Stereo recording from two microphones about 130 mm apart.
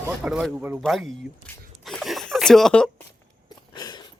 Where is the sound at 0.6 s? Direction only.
15° right (ahead or behind).